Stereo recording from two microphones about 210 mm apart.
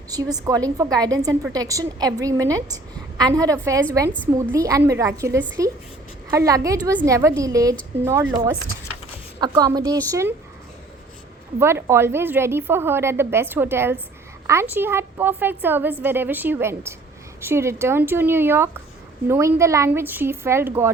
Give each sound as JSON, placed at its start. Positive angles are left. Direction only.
{"t": 0.1, "sound": "a woman's voice", "side_deg": -20}
{"t": 11.6, "sound": "a woman's voice", "side_deg": -10}